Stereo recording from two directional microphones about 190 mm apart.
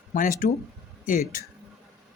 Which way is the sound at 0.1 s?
45° left (ahead or behind).